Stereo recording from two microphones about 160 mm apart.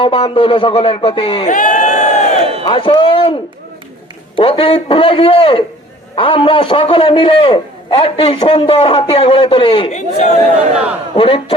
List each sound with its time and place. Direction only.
0.0 s a man's voice: 35° left (ahead or behind)
1.5 s crowd: 50° left (ahead or behind)
2.4 s a sound: 35° right (ahead or behind)
2.6 s a man's voice: 30° left (ahead or behind)
4.4 s a man's voice: 35° left (ahead or behind)
11.2 s a man's voice: 35° left (ahead or behind)